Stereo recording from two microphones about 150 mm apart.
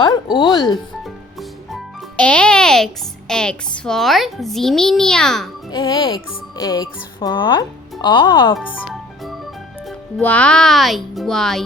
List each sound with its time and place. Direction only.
0.0 s speech: 30° left (ahead or behind)
1.0 s a child's voice: centre (ahead or behind)
5.7 s speech: 30° left (ahead or behind)
8.5 s music: centre (ahead or behind)
10.2 s a child's voice: 10° left (ahead or behind)